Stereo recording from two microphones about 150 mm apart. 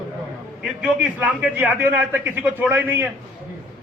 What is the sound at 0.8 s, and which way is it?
A man's voice, 5° right (ahead or behind).